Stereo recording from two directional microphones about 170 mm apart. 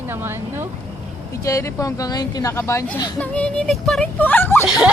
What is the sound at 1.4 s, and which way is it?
Speech, 20° left (ahead or behind).